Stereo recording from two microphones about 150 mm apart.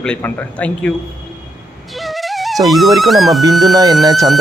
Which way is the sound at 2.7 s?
Centre (ahead or behind).